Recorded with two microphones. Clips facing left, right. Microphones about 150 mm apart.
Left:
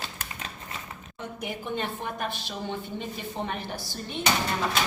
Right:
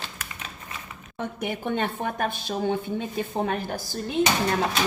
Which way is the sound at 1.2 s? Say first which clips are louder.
Right 6 dB; 60° right (ahead or behind).